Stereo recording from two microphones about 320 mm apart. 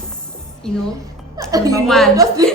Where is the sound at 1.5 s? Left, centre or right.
Centre.